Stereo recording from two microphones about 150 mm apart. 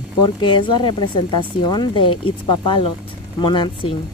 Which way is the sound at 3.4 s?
30° left (ahead or behind).